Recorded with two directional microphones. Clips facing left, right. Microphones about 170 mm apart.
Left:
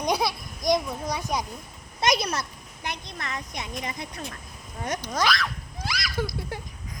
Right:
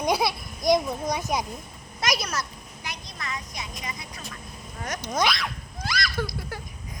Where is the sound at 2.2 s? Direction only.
30° left (ahead or behind).